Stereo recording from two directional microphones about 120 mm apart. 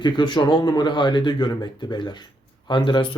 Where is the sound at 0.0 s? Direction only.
40° left (ahead or behind).